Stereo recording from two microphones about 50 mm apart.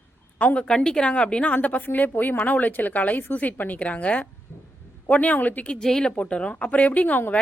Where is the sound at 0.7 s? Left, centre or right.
Centre.